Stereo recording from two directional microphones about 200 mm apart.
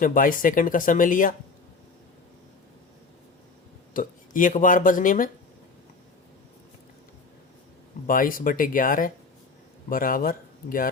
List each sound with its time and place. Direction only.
0.0 s speech: 45° left (ahead or behind)
3.9 s speech: 40° left (ahead or behind)
8.0 s speech: 45° left (ahead or behind)